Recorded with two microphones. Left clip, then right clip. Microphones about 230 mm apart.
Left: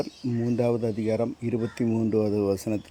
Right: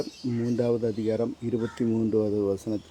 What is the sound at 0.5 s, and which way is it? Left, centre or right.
Speech, left.